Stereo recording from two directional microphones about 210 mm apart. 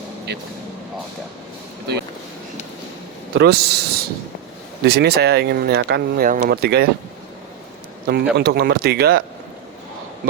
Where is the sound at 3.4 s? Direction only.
50° right (ahead or behind).